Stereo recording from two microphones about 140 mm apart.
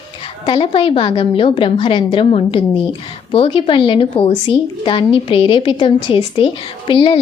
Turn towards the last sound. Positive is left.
turn(degrees=40)  # may be behind; listen again after turning